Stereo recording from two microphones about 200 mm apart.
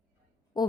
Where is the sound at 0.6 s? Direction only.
20° left (ahead or behind).